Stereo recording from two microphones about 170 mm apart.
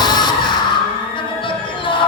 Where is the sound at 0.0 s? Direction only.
25° left (ahead or behind).